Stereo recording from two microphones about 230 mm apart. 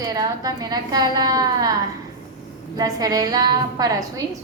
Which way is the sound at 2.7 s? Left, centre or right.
Centre.